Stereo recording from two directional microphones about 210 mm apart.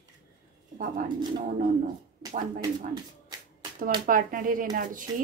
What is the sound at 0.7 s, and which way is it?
Speech, 40° right (ahead or behind).